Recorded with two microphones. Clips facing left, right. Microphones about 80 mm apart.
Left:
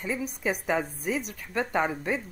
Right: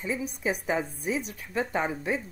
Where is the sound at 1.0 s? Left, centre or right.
Left.